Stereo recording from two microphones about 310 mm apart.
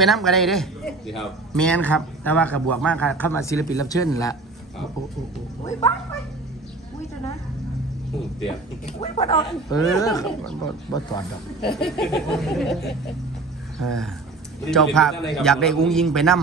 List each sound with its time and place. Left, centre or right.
0.0 s a man's voice: centre
5.6 s speech: centre
8.5 s a man's voice: centre
11.1 s a man's voice: centre
11.7 s a man's voice: centre